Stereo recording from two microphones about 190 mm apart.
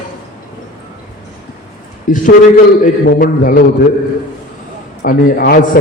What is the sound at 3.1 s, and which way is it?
Speech, 45° left (ahead or behind).